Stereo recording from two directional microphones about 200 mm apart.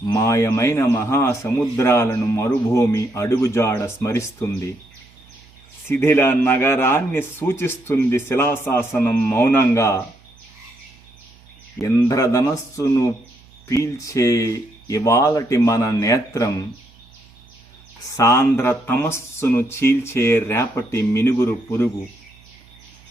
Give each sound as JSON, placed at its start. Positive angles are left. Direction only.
{"t": 0.1, "sound": "speech", "side_deg": 15}
{"t": 5.9, "sound": "speech", "side_deg": 10}
{"t": 11.8, "sound": "speech", "side_deg": 15}
{"t": 18.2, "sound": "speech", "side_deg": 15}